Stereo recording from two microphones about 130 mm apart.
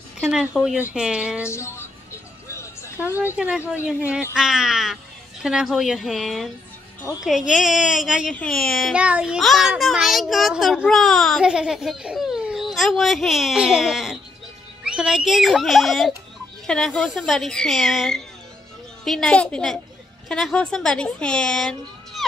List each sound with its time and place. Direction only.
0.5 s speech: 10° left (ahead or behind)
0.9 s speech: 5° right (ahead or behind)
1.4 s music: 20° left (ahead or behind)
2.5 s a sound: 20° left (ahead or behind)
3.3 s a child's voice: 10° right (ahead or behind)
8.9 s a child's voice: 10° right (ahead or behind)